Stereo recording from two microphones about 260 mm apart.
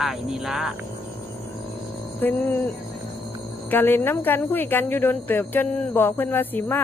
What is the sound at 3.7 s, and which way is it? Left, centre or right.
Speech, centre.